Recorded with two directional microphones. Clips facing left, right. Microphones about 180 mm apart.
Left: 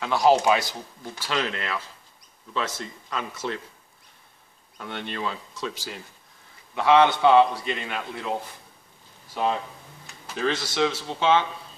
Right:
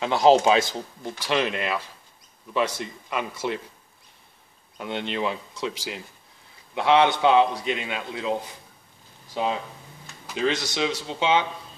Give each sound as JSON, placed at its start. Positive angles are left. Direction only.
{"t": 0.0, "sound": "a man's voice", "side_deg": -25}
{"t": 4.7, "sound": "a man's voice", "side_deg": -20}
{"t": 10.3, "sound": "a man's voice", "side_deg": -20}